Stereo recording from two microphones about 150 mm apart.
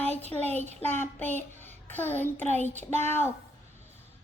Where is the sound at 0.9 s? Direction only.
15° left (ahead or behind).